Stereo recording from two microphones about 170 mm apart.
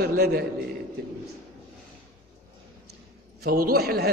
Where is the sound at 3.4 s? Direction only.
65° right (ahead or behind).